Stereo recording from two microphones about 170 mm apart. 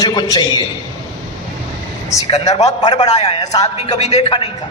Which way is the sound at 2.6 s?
25° left (ahead or behind).